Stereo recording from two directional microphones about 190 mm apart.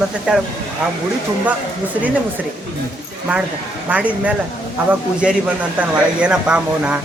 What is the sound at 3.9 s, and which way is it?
Speech, 5° right (ahead or behind).